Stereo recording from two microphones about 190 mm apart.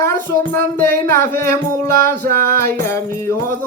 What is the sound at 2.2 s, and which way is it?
Music, 50° right (ahead or behind).